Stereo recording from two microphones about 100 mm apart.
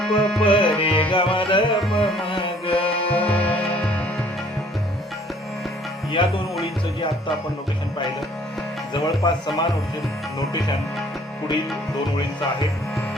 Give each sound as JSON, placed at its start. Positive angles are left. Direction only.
{"t": 0.0, "sound": "music", "side_deg": 5}
{"t": 0.4, "sound": "music", "side_deg": 60}
{"t": 3.1, "sound": "music", "side_deg": 15}
{"t": 6.2, "sound": "speech", "side_deg": 55}
{"t": 8.9, "sound": "speech", "side_deg": 45}